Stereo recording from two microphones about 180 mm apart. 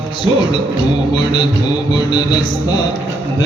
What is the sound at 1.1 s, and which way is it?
Mantra, 25° left (ahead or behind).